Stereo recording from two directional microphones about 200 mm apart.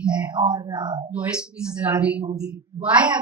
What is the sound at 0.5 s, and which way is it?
Speech, 20° right (ahead or behind).